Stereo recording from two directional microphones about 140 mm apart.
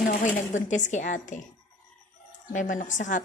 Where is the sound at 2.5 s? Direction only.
65° left (ahead or behind).